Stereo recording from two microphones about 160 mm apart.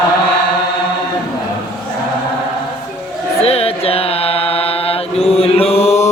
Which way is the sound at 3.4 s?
40° left (ahead or behind).